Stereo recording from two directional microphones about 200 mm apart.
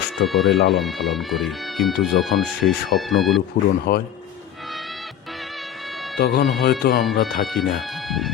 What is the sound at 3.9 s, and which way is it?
Speech, 50° left (ahead or behind).